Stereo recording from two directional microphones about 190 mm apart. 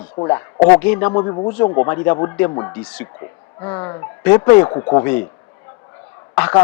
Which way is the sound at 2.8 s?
5° left (ahead or behind).